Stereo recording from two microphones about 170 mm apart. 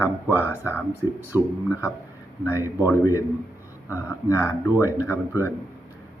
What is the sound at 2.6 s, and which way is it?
Speech, 15° right (ahead or behind).